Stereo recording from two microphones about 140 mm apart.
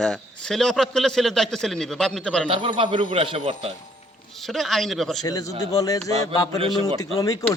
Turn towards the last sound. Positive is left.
turn(degrees=25)  # may be behind; listen again after turning